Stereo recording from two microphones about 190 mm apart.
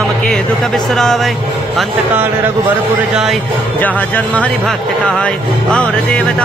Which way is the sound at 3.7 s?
10° left (ahead or behind).